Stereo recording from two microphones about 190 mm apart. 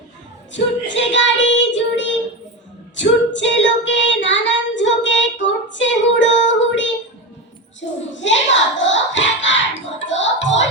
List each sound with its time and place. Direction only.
0.5 s child singing: 75° left (ahead or behind)
2.9 s female singing: 70° left (ahead or behind)
5.7 s child singing: 75° left (ahead or behind)
8.1 s speech: 70° left (ahead or behind)
10.0 s music: 75° left (ahead or behind)